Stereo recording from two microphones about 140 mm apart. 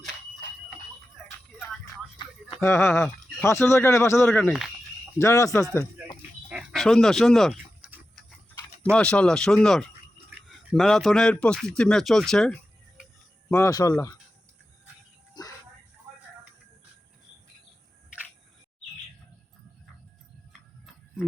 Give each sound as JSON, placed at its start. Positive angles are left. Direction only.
{"t": 1.5, "sound": "music", "side_deg": 5}
{"t": 2.6, "sound": "speech", "side_deg": 20}
{"t": 5.7, "sound": "a sound", "side_deg": 25}
{"t": 6.5, "sound": "dog", "side_deg": -5}
{"t": 6.8, "sound": "speech", "side_deg": 5}
{"t": 7.8, "sound": "tick-tock", "side_deg": -10}
{"t": 8.8, "sound": "speech", "side_deg": 5}
{"t": 13.5, "sound": "speech", "side_deg": 20}
{"t": 15.4, "sound": "a sound", "side_deg": 30}